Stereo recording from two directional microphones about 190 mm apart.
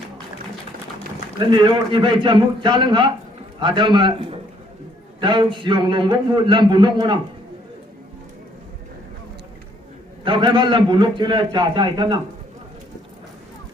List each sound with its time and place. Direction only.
1.4 s a man's voice: 25° right (ahead or behind)
10.2 s a man's voice: 25° right (ahead or behind)